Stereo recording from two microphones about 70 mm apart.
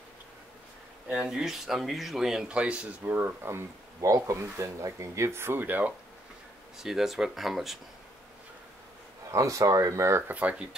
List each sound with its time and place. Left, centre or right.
1.0 s speech: centre
3.0 s speech: right
4.0 s speech: right
6.8 s speech: centre
9.3 s speech: right
10.2 s speech: right